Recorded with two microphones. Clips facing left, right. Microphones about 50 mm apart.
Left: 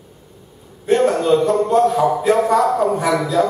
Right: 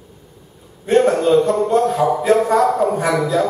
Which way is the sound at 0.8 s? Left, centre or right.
Centre.